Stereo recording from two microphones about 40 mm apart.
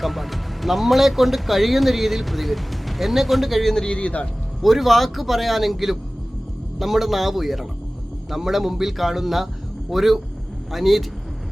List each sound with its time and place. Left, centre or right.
0.0 s speech: centre
3.8 s speech: left
4.6 s speech: centre